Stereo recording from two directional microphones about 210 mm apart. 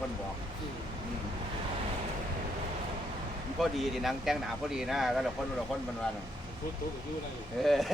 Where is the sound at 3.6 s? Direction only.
Centre (ahead or behind).